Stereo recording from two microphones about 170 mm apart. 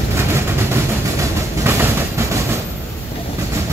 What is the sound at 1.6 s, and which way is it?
Train, 15° right (ahead or behind).